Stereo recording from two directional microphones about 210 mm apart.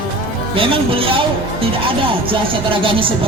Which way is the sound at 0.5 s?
25° right (ahead or behind).